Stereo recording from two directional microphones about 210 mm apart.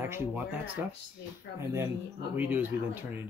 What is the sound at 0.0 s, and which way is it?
Speech, 10° right (ahead or behind).